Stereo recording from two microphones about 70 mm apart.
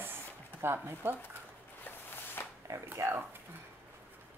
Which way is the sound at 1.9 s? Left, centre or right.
Left.